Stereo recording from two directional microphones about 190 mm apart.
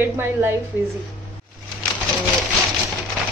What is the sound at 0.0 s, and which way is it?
Speech, 10° right (ahead or behind).